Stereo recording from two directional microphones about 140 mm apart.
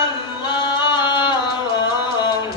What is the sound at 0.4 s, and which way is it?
Music, 30° left (ahead or behind).